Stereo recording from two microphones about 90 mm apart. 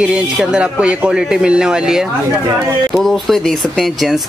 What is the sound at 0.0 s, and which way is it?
A man's voice, 10° right (ahead or behind).